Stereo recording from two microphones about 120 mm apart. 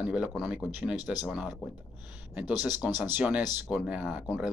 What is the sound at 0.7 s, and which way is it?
Mantra, 10° right (ahead or behind).